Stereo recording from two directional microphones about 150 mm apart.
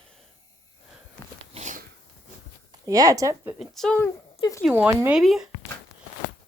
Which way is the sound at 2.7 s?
25° right (ahead or behind).